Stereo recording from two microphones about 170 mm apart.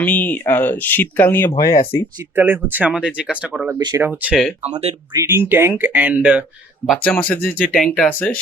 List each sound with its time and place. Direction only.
0.0 s speech: 10° left (ahead or behind)
2.3 s speech: 10° right (ahead or behind)
4.6 s speech: 40° right (ahead or behind)
5.1 s speech: 15° right (ahead or behind)
7.0 s speech: 10° left (ahead or behind)